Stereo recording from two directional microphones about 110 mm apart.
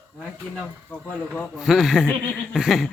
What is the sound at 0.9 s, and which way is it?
Speech, 15° left (ahead or behind).